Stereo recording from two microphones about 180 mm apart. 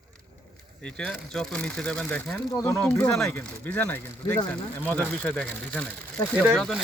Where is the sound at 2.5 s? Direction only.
15° left (ahead or behind).